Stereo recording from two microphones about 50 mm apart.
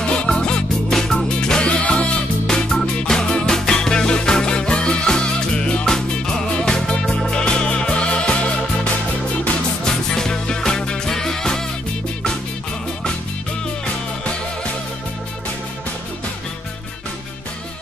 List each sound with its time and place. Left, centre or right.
0.5 s music: centre
2.4 s music: centre
10.1 s music: centre